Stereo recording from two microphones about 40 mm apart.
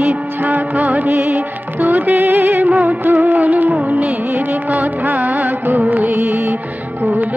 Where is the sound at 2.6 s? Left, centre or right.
Right.